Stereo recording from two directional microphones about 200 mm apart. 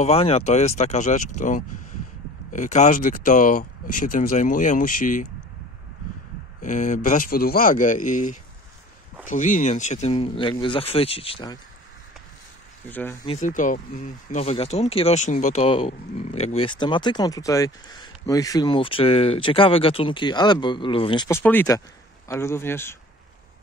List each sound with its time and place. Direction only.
0.0 s speech: 30° left (ahead or behind)
6.6 s speech: 40° left (ahead or behind)
12.8 s speech: 10° left (ahead or behind)
13.3 s speech: 40° left (ahead or behind)
21.3 s speech: 10° left (ahead or behind)